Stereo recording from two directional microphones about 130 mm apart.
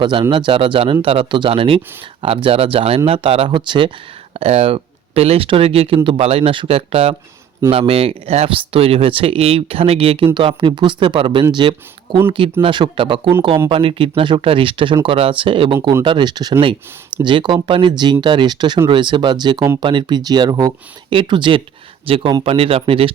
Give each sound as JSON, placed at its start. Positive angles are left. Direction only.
{"t": 0.0, "sound": "speech", "side_deg": -40}
{"t": 4.4, "sound": "speech", "side_deg": -50}